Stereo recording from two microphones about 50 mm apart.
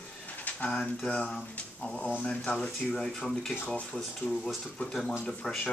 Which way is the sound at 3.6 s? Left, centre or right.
Left.